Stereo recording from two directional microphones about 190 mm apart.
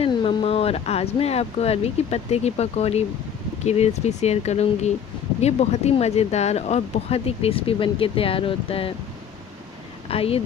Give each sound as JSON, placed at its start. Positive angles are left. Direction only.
{"t": 0.0, "sound": "speech", "side_deg": 25}
{"t": 10.0, "sound": "speech", "side_deg": 30}